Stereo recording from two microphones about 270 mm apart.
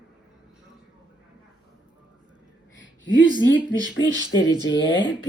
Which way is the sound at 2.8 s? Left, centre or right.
Left.